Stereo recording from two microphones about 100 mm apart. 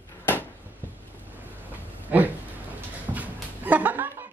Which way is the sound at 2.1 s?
20° right (ahead or behind).